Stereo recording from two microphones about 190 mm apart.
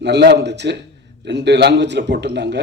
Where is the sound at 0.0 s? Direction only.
65° right (ahead or behind).